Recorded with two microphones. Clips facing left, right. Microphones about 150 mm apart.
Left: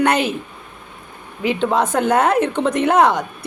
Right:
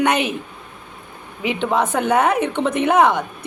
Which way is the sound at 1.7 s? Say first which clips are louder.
Even; 15° left (ahead or behind).